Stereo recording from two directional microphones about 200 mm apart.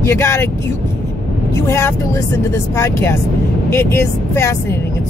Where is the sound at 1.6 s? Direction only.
15° left (ahead or behind).